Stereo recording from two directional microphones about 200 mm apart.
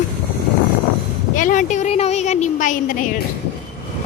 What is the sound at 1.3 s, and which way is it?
Speech, 40° left (ahead or behind).